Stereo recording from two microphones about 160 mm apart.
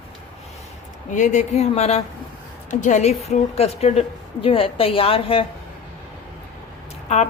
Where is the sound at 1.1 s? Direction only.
50° left (ahead or behind); by 5.4 s 35° left (ahead or behind).